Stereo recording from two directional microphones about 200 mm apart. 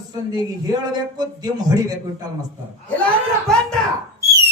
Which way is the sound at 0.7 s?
20° right (ahead or behind).